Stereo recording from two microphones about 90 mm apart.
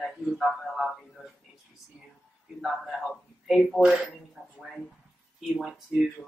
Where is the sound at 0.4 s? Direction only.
Centre (ahead or behind).